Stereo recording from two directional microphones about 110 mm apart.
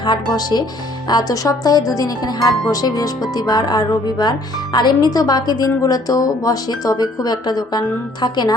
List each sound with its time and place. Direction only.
0.0 s speech: 40° left (ahead or behind)